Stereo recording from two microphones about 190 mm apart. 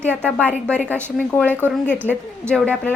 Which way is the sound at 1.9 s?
10° right (ahead or behind).